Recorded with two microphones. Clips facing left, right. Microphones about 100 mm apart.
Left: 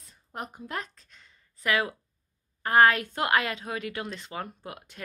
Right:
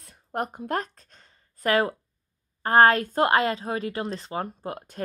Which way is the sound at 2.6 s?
35° right (ahead or behind).